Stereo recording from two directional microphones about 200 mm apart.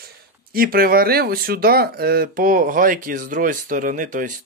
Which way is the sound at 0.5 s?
50° right (ahead or behind).